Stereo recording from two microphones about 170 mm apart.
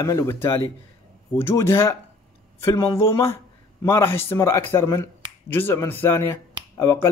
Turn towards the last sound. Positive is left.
turn(degrees=15)  # may be behind; listen again after turning